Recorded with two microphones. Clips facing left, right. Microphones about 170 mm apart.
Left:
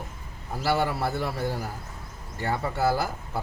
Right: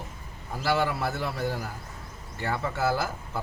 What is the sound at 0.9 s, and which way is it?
A man's voice, 35° left (ahead or behind).